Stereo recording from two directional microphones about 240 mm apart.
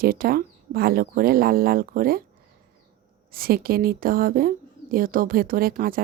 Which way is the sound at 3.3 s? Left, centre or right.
Right.